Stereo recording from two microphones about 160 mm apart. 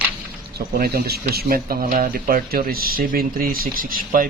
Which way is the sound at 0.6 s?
75° right (ahead or behind).